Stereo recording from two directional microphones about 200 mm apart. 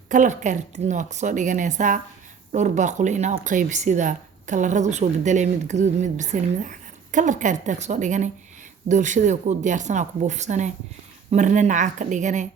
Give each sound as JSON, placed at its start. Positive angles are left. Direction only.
{"t": 0.1, "sound": "speech", "side_deg": -40}